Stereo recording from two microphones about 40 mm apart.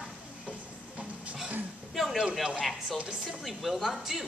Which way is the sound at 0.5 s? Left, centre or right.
Right.